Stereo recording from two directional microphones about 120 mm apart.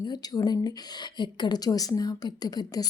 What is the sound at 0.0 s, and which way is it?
A woman's voice, 35° left (ahead or behind).